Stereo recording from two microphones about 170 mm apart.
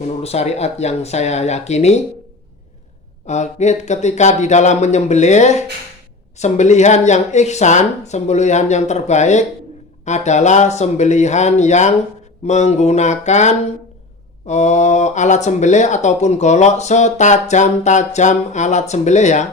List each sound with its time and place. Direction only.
0.2 s speech: 40° left (ahead or behind)
3.2 s speech: 45° left (ahead or behind)